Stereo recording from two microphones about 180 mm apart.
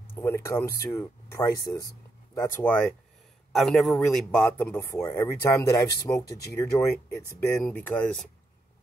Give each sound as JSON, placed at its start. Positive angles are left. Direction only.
{"t": 0.1, "sound": "speech", "side_deg": 15}
{"t": 3.5, "sound": "speech", "side_deg": 0}